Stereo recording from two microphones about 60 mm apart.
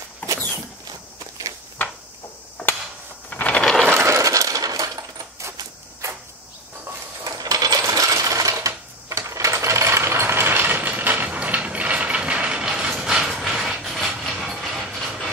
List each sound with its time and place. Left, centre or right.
0.2 s a sound: left
3.3 s a sound: left
3.8 s coin: right
4.1 s coin: right
7.2 s coin: right
7.9 s coin: right; by 13.7 s centre
13.8 s wood: centre